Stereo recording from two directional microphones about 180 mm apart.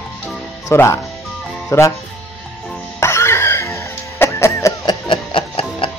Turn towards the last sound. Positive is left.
turn(degrees=30)  # may be behind; listen again after turning